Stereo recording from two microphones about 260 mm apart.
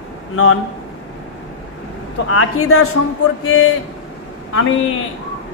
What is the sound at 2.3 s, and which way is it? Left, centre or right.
Speech, left.